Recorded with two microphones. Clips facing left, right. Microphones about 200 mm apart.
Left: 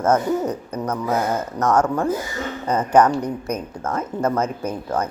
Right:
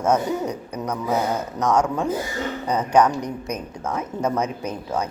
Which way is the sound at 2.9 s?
10° right (ahead or behind).